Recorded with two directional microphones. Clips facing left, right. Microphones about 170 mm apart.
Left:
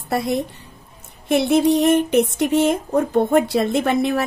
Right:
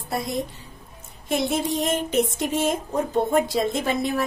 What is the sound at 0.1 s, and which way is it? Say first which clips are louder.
A woman's voice: left 6 dB; 65° left (ahead or behind).